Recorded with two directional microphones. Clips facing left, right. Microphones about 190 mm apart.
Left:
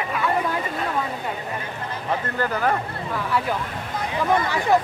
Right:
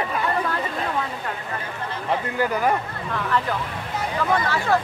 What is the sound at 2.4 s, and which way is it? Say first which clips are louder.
Speech: right 1 dB; 10° right (ahead or behind).